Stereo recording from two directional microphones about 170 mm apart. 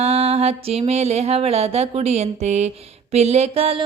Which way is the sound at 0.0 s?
35° right (ahead or behind).